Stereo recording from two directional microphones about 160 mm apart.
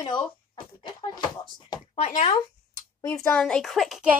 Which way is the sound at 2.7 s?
20° left (ahead or behind).